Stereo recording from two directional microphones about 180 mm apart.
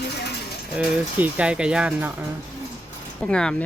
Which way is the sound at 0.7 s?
10° right (ahead or behind).